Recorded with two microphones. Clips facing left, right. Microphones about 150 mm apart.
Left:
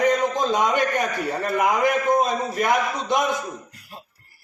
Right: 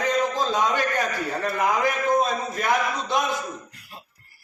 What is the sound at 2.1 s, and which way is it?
A man's voice, 20° left (ahead or behind).